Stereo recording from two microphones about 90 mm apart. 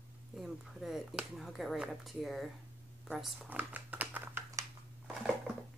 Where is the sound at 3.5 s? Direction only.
20° right (ahead or behind).